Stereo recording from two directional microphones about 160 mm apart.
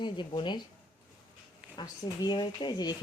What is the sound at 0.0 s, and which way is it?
Speech, 30° left (ahead or behind).